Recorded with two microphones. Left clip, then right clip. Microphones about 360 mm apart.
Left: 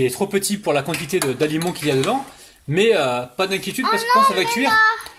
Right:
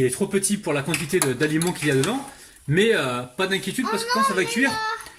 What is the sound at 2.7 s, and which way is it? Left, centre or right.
Speech, centre.